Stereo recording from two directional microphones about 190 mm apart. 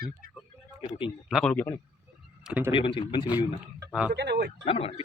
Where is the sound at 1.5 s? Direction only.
10° left (ahead or behind).